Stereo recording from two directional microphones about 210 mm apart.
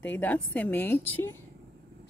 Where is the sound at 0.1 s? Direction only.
10° left (ahead or behind).